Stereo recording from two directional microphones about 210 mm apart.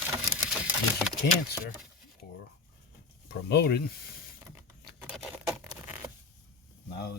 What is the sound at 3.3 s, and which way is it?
Speech, 50° left (ahead or behind).